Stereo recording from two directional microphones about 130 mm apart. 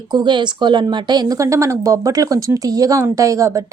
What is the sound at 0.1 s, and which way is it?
Speech, 35° right (ahead or behind).